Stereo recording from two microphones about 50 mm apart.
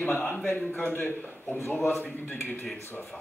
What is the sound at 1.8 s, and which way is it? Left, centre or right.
Speech, left.